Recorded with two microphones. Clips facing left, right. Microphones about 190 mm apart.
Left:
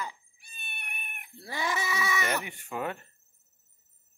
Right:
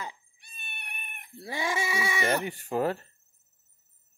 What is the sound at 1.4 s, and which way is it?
Goat, 20° right (ahead or behind).